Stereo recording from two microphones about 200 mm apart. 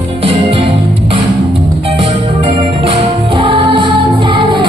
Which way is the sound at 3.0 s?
25° right (ahead or behind).